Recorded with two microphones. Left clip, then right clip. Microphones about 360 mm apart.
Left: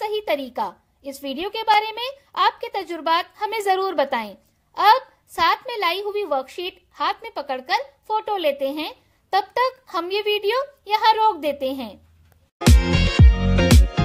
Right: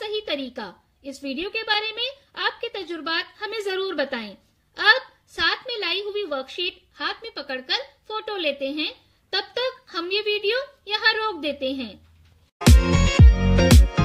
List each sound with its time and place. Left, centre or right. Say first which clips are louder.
0.1 s a sound: left 4 dB; centre
1.0 s speech: left 2 dB; centre
12.6 s music: even; centre